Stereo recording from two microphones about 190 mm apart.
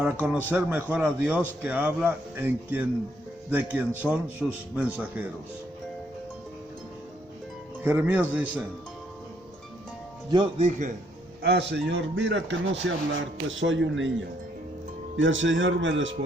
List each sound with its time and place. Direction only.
0.0 s a man's voice: 5° right (ahead or behind)
7.9 s speech: 10° right (ahead or behind)
10.3 s speech: 25° right (ahead or behind)
10.7 s a man's voice: 40° right (ahead or behind)
11.4 s a man's voice: 65° right (ahead or behind); by 14.1 s 80° right
15.1 s speech: 80° right